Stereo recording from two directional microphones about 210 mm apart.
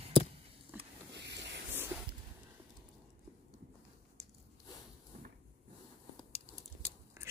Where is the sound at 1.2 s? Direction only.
55° right (ahead or behind).